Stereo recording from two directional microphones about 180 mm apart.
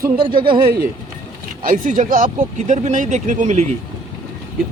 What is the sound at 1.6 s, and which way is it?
Speech, 45° right (ahead or behind).